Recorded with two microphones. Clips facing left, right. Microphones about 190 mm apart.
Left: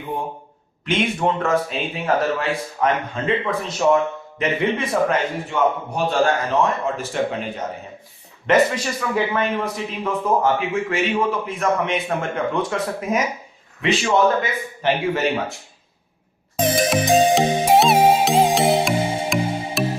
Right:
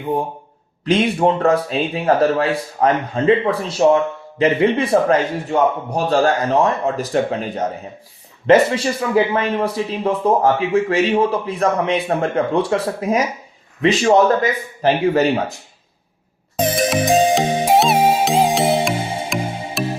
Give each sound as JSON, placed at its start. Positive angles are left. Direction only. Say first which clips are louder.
{"t": 0.9, "sound": "speech", "louder": "right 5 dB", "side_deg": -35}
{"t": 16.6, "sound": "music", "louder": "right 1 dB", "side_deg": 0}